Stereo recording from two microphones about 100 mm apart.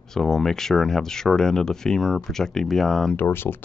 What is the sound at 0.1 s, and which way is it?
Speech, 5° left (ahead or behind).